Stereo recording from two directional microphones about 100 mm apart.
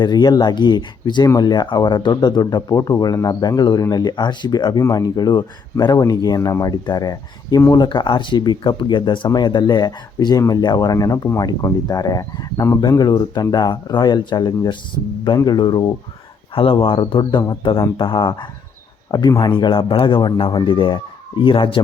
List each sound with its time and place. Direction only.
0.0 s speech: 45° left (ahead or behind)
16.6 s speech: 65° left (ahead or behind)